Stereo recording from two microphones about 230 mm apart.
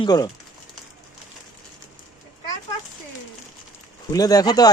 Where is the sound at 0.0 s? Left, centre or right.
Centre.